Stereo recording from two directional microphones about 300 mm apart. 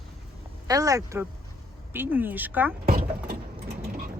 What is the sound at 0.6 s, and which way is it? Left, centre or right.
Speech, centre.